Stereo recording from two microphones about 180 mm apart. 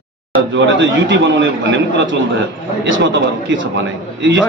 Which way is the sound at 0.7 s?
90° right.